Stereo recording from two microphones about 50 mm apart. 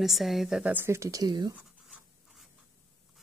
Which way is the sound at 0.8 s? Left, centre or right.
Right.